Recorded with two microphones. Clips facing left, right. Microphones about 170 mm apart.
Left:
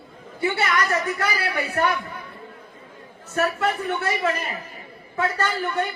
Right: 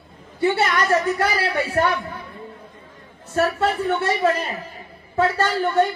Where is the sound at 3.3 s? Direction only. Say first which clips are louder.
Right 3 dB; 25° right (ahead or behind).